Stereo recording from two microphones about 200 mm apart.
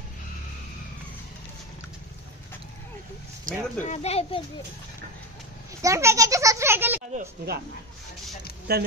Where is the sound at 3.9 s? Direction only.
30° left (ahead or behind).